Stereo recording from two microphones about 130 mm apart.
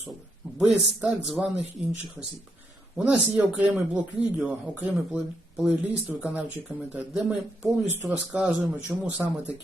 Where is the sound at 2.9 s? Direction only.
10° right (ahead or behind).